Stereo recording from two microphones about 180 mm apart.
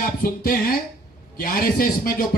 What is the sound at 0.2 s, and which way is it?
A man's voice, 55° left (ahead or behind).